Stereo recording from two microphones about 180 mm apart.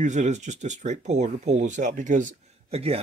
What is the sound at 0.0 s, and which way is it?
Speech, 40° right (ahead or behind).